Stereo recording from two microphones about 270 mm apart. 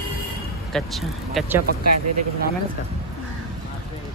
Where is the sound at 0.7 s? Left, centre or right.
Centre.